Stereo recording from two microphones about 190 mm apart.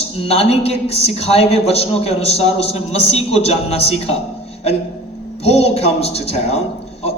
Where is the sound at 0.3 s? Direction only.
30° left (ahead or behind).